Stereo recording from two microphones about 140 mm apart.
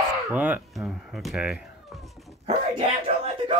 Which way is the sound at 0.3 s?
10° right (ahead or behind).